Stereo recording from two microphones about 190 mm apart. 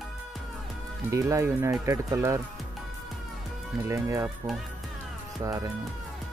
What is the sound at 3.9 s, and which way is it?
Speech, 15° right (ahead or behind).